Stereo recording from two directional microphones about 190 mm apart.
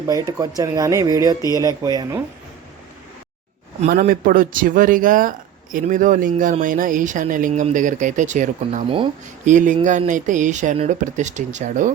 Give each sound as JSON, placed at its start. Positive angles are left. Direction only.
{"t": 0.1, "sound": "speech", "side_deg": -20}
{"t": 1.4, "sound": "speech", "side_deg": 20}
{"t": 1.6, "sound": "speech", "side_deg": -20}
{"t": 3.8, "sound": "speech", "side_deg": -45}